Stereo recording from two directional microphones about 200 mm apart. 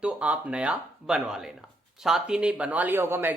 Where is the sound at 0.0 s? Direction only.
5° right (ahead or behind).